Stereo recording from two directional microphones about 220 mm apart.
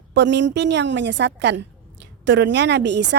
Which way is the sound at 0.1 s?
55° right (ahead or behind).